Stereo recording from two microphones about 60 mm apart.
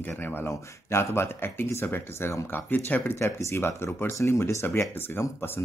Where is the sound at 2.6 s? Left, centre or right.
Left.